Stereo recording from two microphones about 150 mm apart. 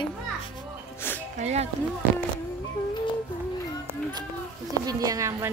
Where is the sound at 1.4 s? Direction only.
50° right (ahead or behind).